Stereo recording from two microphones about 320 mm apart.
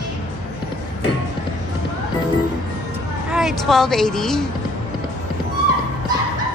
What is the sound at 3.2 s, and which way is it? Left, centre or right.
A woman's voice, centre.